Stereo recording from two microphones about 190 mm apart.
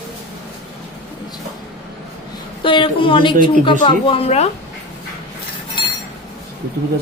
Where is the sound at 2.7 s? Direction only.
25° left (ahead or behind).